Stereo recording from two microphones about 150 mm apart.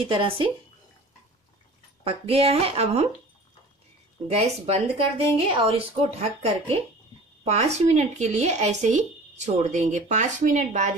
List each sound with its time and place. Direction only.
0.0 s speech: 35° right (ahead or behind)
2.0 s speech: 40° right (ahead or behind)
4.3 s speech: 45° right (ahead or behind)